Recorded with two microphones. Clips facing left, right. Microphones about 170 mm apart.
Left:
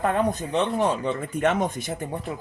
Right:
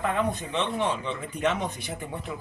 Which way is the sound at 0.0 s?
45° left (ahead or behind).